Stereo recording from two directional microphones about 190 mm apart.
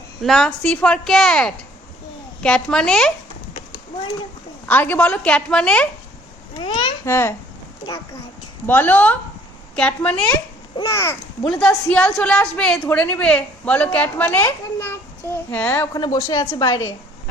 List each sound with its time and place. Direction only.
0.2 s speech: centre (ahead or behind)
4.7 s speech: 10° left (ahead or behind)
6.6 s a woman's voice: 25° left (ahead or behind)
7.0 s a woman's voice: 15° left (ahead or behind)
8.6 s a woman's voice: 10° left (ahead or behind)
11.4 s a woman's voice: centre (ahead or behind)